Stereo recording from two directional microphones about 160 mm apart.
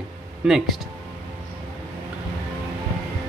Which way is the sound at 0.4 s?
5° right (ahead or behind).